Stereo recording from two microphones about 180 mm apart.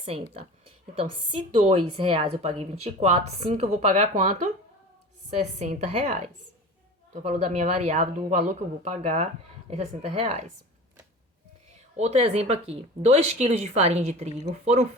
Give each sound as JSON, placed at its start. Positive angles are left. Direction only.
{"t": 0.9, "sound": "a woman's voice", "side_deg": -30}
{"t": 5.3, "sound": "a woman's voice", "side_deg": -40}
{"t": 11.9, "sound": "a woman's voice", "side_deg": -40}